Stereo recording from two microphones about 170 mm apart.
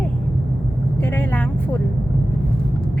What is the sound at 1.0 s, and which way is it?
Speech, 10° left (ahead or behind).